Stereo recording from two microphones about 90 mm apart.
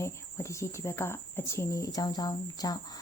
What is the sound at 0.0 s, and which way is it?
Speech, 30° left (ahead or behind).